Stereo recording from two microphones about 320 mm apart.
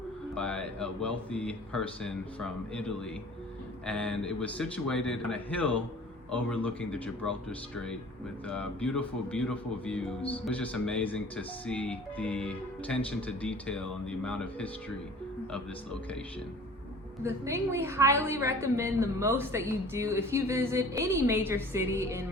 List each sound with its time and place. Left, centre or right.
0.3 s speech: centre
8.4 s speech: centre
17.2 s a woman's voice: centre